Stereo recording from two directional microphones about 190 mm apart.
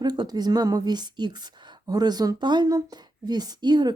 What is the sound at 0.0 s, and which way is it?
A woman's voice, 20° right (ahead or behind).